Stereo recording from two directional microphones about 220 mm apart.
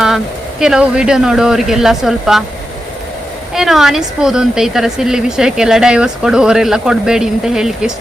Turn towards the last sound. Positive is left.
turn(degrees=-5)  # may be behind; listen again after turning